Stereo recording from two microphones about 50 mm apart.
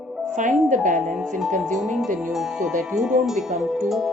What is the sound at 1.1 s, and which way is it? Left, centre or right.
Speech, centre.